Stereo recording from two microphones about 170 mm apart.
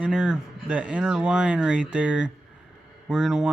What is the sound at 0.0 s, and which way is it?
Speech, 5° right (ahead or behind).